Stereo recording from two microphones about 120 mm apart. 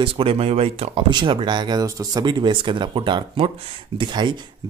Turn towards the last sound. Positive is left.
turn(degrees=-40)  # may be behind; listen again after turning